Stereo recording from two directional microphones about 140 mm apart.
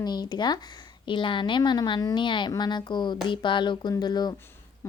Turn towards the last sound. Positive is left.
turn(degrees=30)  # may be behind; listen again after turning